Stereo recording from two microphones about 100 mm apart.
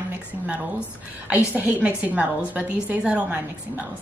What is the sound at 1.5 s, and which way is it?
A woman's voice, 15° right (ahead or behind).